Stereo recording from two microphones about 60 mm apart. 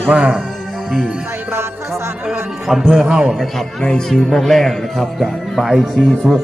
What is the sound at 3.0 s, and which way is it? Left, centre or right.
Speech, centre.